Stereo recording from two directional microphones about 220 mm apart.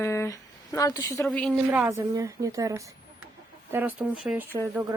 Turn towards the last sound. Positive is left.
turn(degrees=-10)  # may be behind; listen again after turning